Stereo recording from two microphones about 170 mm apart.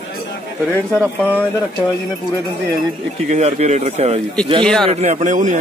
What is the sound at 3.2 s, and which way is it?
Speech, 40° right (ahead or behind).